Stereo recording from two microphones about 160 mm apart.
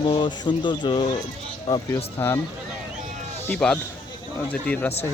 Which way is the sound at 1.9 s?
15° left (ahead or behind).